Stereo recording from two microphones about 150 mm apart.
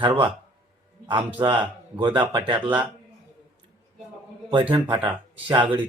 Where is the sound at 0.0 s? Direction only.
35° right (ahead or behind).